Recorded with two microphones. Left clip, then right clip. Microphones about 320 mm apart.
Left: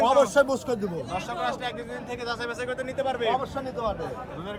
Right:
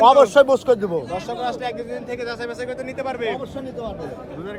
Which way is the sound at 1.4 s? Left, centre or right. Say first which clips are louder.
Right 4 dB; centre.